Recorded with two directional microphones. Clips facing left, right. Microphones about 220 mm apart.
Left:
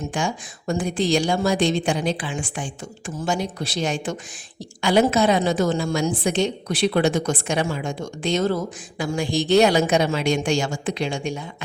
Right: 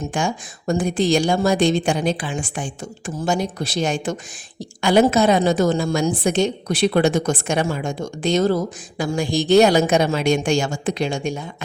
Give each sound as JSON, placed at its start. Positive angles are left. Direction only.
{"t": 0.1, "sound": "a woman's voice", "side_deg": -50}